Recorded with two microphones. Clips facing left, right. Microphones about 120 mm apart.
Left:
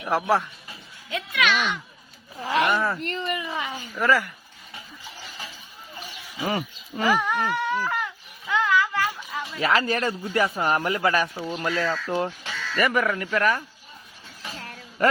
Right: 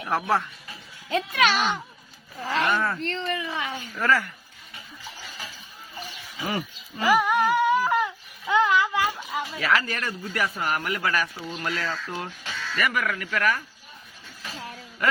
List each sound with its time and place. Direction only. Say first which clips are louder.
0.0 s speech: left 2 dB; 15° left (ahead or behind)
1.1 s speech: right 2 dB; 35° right (ahead or behind)
2.4 s speech: left 2 dB; 15° left (ahead or behind)
6.3 s speech: left 3 dB; 20° left (ahead or behind)
7.1 s a sound: right 4 dB; 10° right (ahead or behind)
9.6 s speech: left 4 dB; 25° left (ahead or behind)